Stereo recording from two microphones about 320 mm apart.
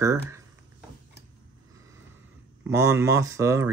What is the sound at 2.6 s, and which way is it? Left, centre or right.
Speech, centre.